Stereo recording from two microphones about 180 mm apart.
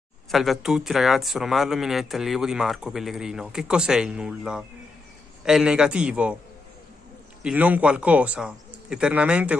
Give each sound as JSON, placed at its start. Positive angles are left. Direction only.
{"t": 0.3, "sound": "speech", "side_deg": 0}
{"t": 7.4, "sound": "speech", "side_deg": -10}